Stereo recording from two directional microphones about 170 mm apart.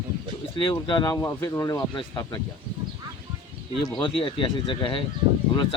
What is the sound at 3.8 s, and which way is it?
Speech, 30° left (ahead or behind).